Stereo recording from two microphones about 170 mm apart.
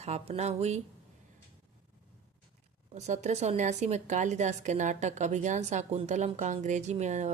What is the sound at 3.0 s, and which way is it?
Speech, 45° right (ahead or behind).